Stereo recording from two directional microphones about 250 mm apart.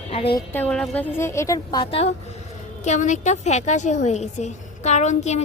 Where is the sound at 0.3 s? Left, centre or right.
Centre.